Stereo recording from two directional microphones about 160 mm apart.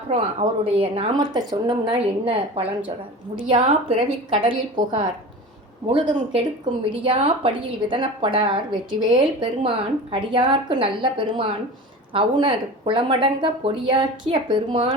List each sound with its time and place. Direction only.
0.1 s a woman's voice: 40° right (ahead or behind)